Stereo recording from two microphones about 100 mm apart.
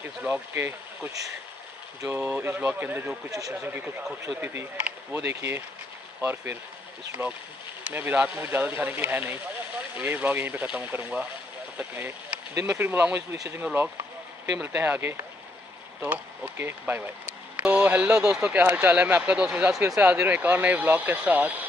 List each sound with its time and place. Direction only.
0.0 s speech: 20° right (ahead or behind)
3.3 s speech: 35° right (ahead or behind)
3.6 s speech: 20° right (ahead or behind)